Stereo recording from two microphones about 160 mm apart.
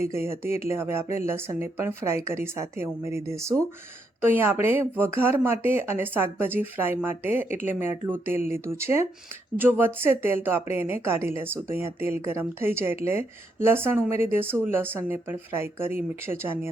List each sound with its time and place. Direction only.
0.0 s speech: 15° right (ahead or behind)